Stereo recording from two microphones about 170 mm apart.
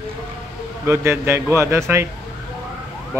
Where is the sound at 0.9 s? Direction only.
15° right (ahead or behind).